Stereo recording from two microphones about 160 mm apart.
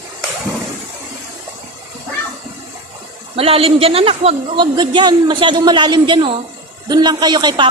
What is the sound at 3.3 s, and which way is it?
A man's voice, 35° right (ahead or behind).